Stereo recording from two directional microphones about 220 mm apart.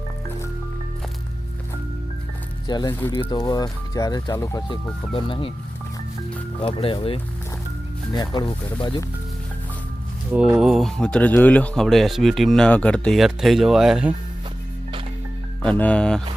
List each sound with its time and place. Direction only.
2.6 s speech: 20° left (ahead or behind)
6.7 s speech: 25° left (ahead or behind)
10.3 s speech: 5° right (ahead or behind)
15.6 s speech: 5° left (ahead or behind)